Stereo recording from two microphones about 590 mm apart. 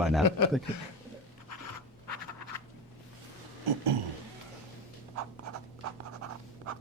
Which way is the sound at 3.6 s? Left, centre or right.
Right.